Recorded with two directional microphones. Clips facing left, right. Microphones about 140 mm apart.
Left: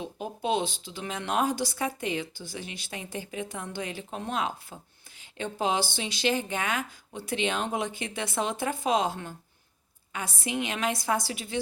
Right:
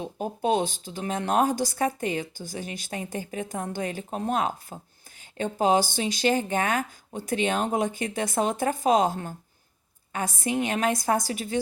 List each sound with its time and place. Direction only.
0.0 s speech: 45° right (ahead or behind)